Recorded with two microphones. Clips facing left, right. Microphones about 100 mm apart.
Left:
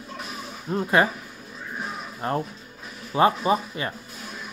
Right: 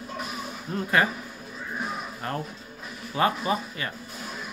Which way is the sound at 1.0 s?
25° left (ahead or behind).